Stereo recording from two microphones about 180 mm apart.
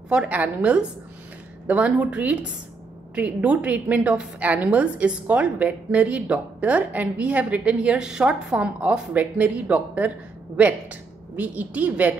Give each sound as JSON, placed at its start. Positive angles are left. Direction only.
{"t": 0.1, "sound": "a woman's voice", "side_deg": -5}